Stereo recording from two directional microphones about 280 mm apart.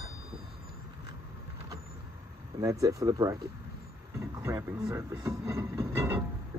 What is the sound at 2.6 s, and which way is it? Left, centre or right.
Speech, centre.